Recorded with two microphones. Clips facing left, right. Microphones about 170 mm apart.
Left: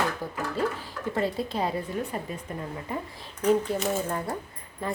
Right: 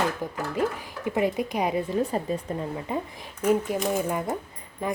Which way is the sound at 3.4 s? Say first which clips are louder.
Even; 10° right (ahead or behind).